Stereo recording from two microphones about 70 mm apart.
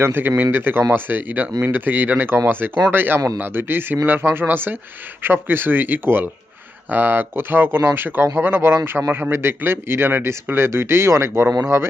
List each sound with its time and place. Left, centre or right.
0.0 s a man's voice: right